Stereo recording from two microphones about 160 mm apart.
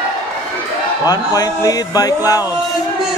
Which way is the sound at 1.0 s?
25° left (ahead or behind).